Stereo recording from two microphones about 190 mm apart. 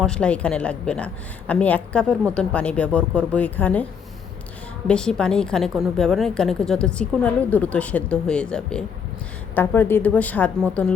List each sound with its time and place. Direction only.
0.0 s a woman's voice: 5° left (ahead or behind)
4.9 s a woman's voice: 5° left (ahead or behind)